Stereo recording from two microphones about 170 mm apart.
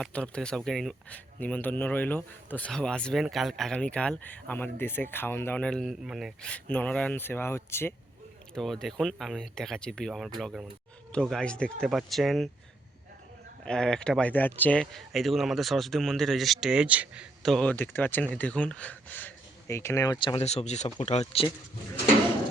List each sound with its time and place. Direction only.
0.0 s speech: 5° left (ahead or behind)
8.5 s speech: centre (ahead or behind)
13.7 s speech: 5° left (ahead or behind)
20.1 s speech: 30° left (ahead or behind)